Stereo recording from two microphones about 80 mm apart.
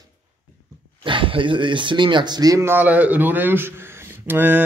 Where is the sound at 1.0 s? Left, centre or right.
Right.